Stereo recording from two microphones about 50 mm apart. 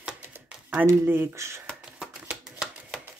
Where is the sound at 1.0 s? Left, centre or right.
Right.